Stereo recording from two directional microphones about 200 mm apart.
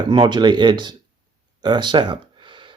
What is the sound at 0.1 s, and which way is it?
Speech, 20° right (ahead or behind).